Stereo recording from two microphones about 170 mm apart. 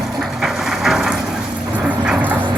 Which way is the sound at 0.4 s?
Centre (ahead or behind).